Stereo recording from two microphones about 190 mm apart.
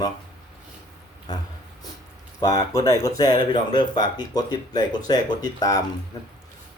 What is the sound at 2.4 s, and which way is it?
Speech, 20° left (ahead or behind).